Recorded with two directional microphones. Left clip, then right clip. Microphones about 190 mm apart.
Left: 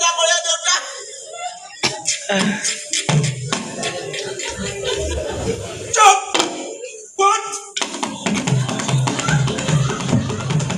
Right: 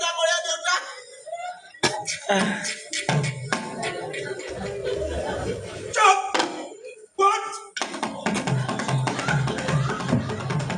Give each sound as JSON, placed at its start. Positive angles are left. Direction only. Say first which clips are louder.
{"t": 0.0, "sound": "a sound", "louder": "left 6 dB", "side_deg": -50}
{"t": 1.8, "sound": "music", "louder": "left 3 dB", "side_deg": -60}
{"t": 2.2, "sound": "speech", "louder": "left 2 dB", "side_deg": -15}
{"t": 2.6, "sound": "music", "louder": "left 6 dB", "side_deg": -50}
{"t": 5.9, "sound": "a sound", "louder": "left 6 dB", "side_deg": -50}
{"t": 7.2, "sound": "music", "louder": "left 5 dB", "side_deg": -50}